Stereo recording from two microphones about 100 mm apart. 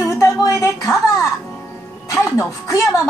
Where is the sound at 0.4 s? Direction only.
30° left (ahead or behind).